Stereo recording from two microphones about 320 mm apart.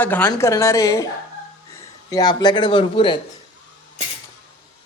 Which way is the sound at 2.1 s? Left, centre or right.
Centre.